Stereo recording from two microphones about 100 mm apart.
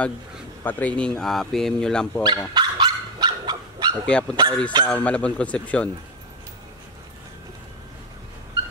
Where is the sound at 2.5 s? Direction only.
50° right (ahead or behind).